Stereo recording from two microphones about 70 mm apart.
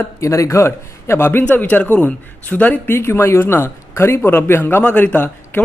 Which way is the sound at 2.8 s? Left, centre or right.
Left.